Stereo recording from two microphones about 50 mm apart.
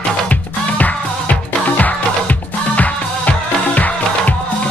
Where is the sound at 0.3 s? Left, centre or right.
Left.